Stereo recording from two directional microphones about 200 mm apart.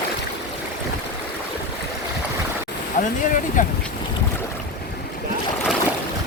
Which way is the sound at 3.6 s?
40° left (ahead or behind).